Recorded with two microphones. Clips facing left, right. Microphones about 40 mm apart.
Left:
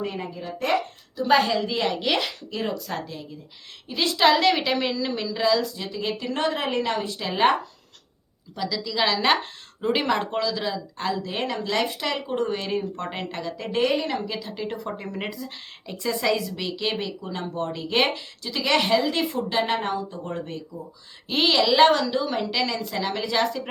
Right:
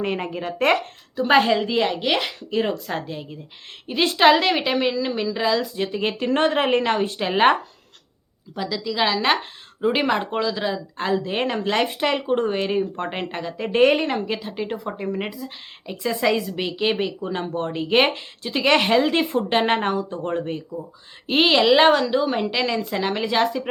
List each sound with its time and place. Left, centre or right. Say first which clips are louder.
0.0 s speech: right 5 dB; right
1.1 s a woman's voice: right 3 dB; right; by 2.3 s centre
2.5 s a woman's voice: right 5 dB; right; by 5.6 s centre
5.7 s speech: right 5 dB; right
8.5 s a woman's voice: right 2 dB; centre
13.8 s a woman's voice: right 6 dB; right
14.8 s a woman's voice: right 4 dB; centre
16.6 s a woman's voice: right 5 dB; right